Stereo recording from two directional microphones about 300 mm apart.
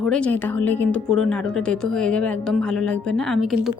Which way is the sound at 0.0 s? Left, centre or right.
Centre.